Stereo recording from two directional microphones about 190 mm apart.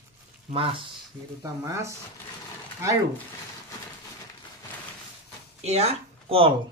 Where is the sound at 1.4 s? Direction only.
15° right (ahead or behind).